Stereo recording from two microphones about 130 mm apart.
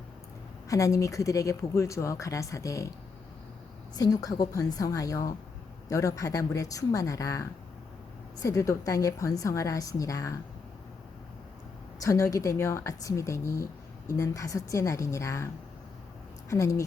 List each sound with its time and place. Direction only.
0.7 s speech: 25° left (ahead or behind)
3.9 s speech: 30° left (ahead or behind)
11.9 s speech: 25° left (ahead or behind)
16.5 s speech: 25° left (ahead or behind)